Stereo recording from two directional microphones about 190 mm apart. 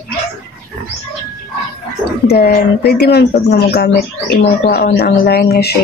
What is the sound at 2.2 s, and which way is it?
Speech, 55° left (ahead or behind).